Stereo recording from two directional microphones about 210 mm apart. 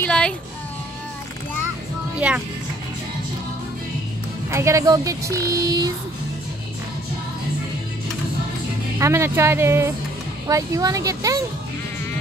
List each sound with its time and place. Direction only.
0.0 s a sound: 5° left (ahead or behind)
2.1 s speech: 5° right (ahead or behind)
4.5 s speech: 15° right (ahead or behind)
8.9 s speech: 15° right (ahead or behind)